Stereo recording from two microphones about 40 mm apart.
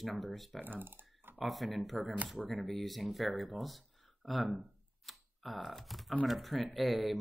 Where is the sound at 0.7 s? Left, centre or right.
Right.